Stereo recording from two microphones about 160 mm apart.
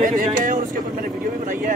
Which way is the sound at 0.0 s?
55° right (ahead or behind).